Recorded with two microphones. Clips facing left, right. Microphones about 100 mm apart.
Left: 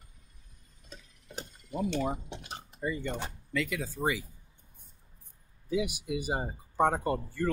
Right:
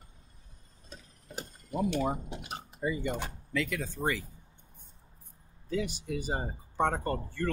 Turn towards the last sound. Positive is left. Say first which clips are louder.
# left 2 dB
turn(degrees=10)  # may be behind; listen again after turning